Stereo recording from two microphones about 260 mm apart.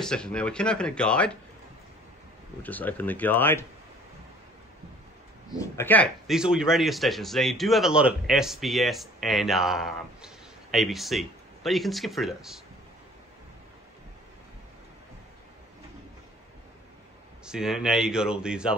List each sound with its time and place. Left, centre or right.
0.0 s a man's voice: centre
2.6 s speech: centre
5.6 s a man's voice: centre
17.5 s a man's voice: centre